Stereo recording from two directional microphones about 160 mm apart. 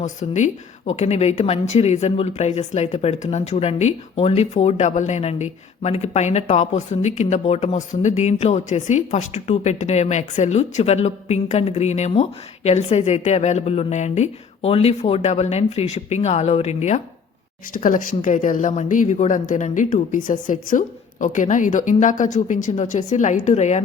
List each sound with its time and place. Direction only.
0.0 s speech: 50° left (ahead or behind)
17.7 s speech: 55° left (ahead or behind)